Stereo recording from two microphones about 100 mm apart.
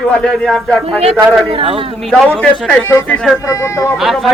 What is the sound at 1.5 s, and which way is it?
Speech, 65° right (ahead or behind).